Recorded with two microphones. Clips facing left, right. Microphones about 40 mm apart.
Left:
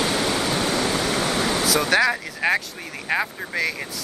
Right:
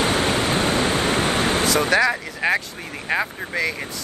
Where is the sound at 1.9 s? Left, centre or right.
Centre.